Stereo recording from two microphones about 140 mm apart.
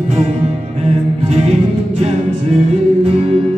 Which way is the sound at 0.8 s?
50° right (ahead or behind).